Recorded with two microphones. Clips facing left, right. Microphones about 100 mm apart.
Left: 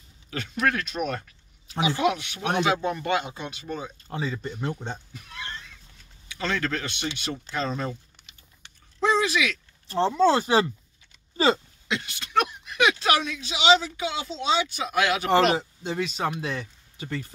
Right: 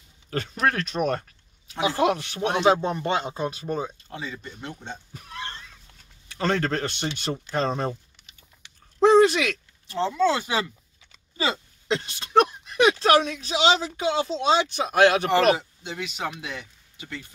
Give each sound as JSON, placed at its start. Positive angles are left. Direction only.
{"t": 0.3, "sound": "speech", "side_deg": -40}
{"t": 4.1, "sound": "speech", "side_deg": 35}
{"t": 5.1, "sound": "a sound", "side_deg": -40}
{"t": 6.2, "sound": "speech", "side_deg": -40}
{"t": 9.0, "sound": "a sound", "side_deg": -45}
{"t": 9.8, "sound": "speech", "side_deg": 35}
{"t": 11.9, "sound": "speech", "side_deg": -35}
{"t": 15.5, "sound": "speech", "side_deg": 35}